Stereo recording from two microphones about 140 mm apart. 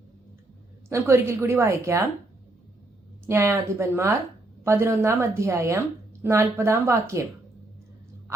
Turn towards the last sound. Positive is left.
turn(degrees=-20)  # may be behind; listen again after turning